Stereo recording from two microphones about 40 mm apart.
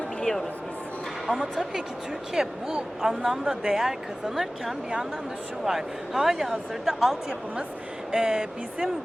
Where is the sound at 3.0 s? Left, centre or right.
Centre.